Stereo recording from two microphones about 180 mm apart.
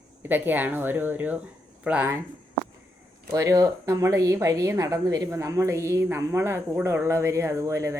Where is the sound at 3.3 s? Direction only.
20° right (ahead or behind).